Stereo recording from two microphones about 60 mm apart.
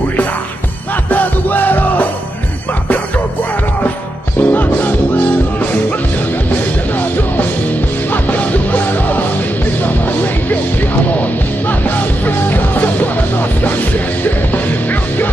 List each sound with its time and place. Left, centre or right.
1.1 s music: left
4.4 s music: left
8.1 s music: left
11.1 s music: left